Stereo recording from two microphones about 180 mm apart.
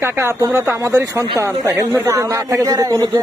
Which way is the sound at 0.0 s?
15° right (ahead or behind).